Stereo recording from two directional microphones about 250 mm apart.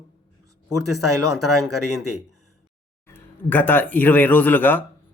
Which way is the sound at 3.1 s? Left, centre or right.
Centre.